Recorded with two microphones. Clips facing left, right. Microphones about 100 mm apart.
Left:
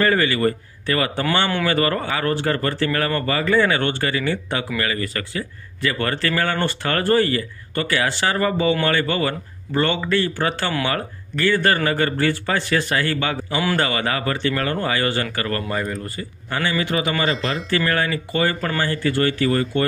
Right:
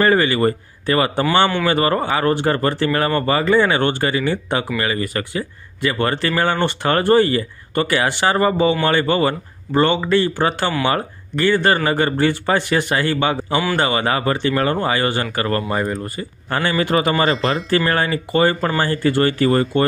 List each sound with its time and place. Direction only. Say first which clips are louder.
0.0 s speech: right 3 dB; 30° right (ahead or behind)
16.4 s speech: right 4 dB; 45° right (ahead or behind)